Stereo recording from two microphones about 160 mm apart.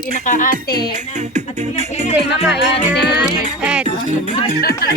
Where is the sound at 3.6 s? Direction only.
5° right (ahead or behind).